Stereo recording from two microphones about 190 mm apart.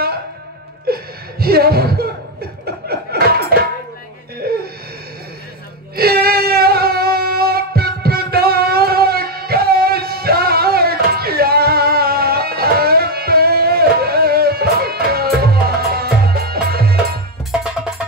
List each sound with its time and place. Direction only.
0.8 s chuckle: 55° right (ahead or behind)
2.6 s a sound: 55° right (ahead or behind)
4.4 s wheeze: 55° right (ahead or behind)
5.9 s music: 55° right (ahead or behind)
17.5 s music: 5° right (ahead or behind)